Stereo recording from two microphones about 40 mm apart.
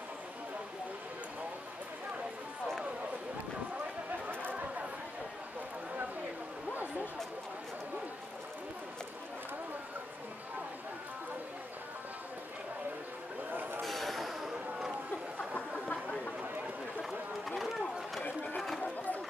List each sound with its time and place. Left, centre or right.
4.1 s a sound: right
13.5 s vehicle: right
13.8 s a sound: centre
15.9 s chatter: left
17.0 s run: centre
18.8 s chatter: left